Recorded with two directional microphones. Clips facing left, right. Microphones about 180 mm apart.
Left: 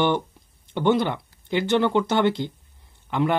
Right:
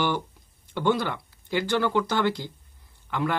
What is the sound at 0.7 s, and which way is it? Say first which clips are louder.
Speech: left 4 dB; 20° left (ahead or behind).